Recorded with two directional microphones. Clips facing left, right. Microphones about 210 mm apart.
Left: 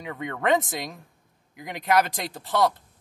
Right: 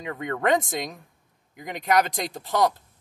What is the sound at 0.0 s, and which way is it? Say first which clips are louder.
Speech: right 2 dB; centre (ahead or behind).